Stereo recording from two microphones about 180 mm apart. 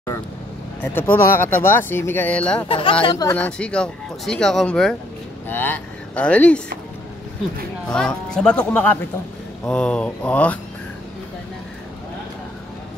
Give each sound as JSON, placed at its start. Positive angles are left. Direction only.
{"t": 0.9, "sound": "speech", "side_deg": 10}
{"t": 2.7, "sound": "speech", "side_deg": 30}
{"t": 3.3, "sound": "speech", "side_deg": 5}
{"t": 7.9, "sound": "speech", "side_deg": 5}